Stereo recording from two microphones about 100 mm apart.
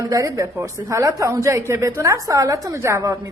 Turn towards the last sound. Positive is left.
turn(degrees=-30)  # may be behind; listen again after turning